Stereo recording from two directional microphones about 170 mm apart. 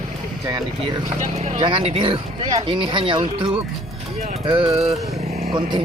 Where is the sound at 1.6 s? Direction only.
30° right (ahead or behind).